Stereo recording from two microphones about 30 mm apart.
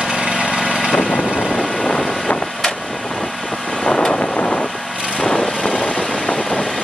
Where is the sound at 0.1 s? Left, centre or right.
Right.